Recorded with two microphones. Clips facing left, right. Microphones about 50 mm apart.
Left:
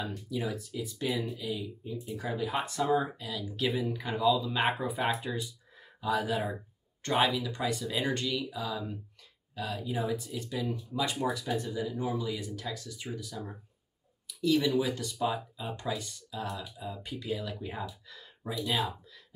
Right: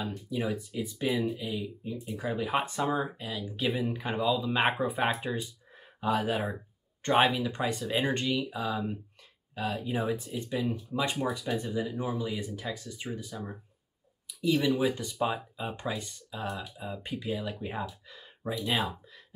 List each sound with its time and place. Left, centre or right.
0.1 s speech: right
2.1 s speech: right
3.8 s speech: right
14.2 s a sound: right
14.8 s speech: right